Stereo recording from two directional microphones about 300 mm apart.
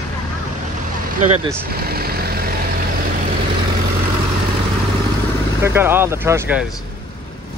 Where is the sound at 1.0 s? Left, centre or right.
Right.